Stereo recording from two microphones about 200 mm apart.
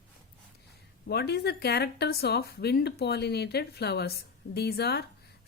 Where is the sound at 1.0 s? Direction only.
55° left (ahead or behind).